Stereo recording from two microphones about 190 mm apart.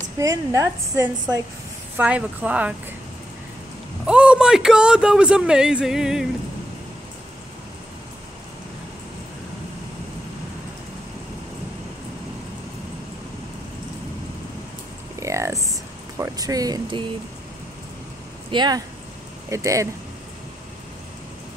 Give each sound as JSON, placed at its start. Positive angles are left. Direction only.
{"t": 0.2, "sound": "a woman's voice", "side_deg": -15}
{"t": 4.0, "sound": "a man's voice", "side_deg": -5}
{"t": 15.1, "sound": "a sound", "side_deg": -15}
{"t": 16.2, "sound": "speech", "side_deg": -20}
{"t": 18.5, "sound": "a woman's voice", "side_deg": -25}